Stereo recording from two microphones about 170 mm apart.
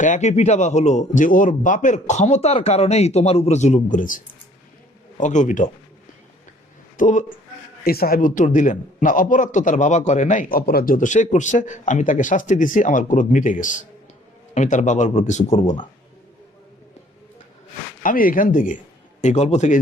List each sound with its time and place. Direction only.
0.0 s a man's voice: 45° left (ahead or behind)
6.9 s speech: 45° left (ahead or behind)
7.9 s a man's voice: 60° left (ahead or behind); by 15.7 s 45° left (ahead or behind)
18.0 s a man's voice: 55° left (ahead or behind)